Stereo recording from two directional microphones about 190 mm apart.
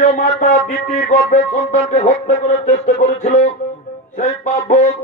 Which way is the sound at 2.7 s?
35° left (ahead or behind).